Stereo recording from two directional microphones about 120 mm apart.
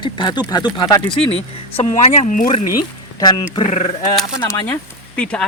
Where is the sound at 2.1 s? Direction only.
85° left.